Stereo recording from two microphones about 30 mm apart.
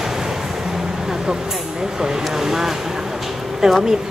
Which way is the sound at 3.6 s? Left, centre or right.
Centre.